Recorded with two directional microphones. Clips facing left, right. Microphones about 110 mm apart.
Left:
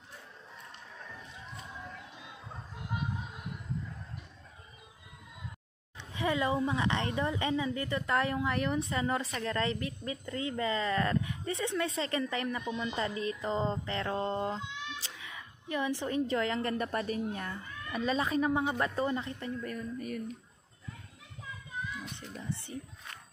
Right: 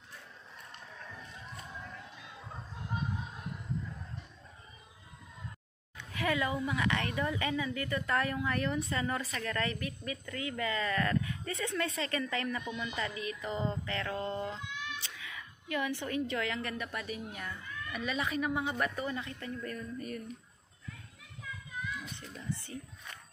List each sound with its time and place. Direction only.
5.9 s a woman's voice: 25° left (ahead or behind)
14.6 s cat: 25° left (ahead or behind)
16.7 s speech: 40° left (ahead or behind)
19.6 s speech: 5° left (ahead or behind)
22.5 s a woman's voice: 25° left (ahead or behind)